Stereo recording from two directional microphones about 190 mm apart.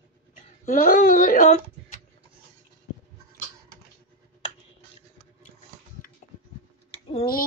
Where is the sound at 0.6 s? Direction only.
45° left (ahead or behind).